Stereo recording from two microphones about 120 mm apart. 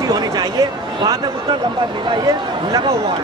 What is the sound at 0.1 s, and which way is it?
Speech, 35° right (ahead or behind).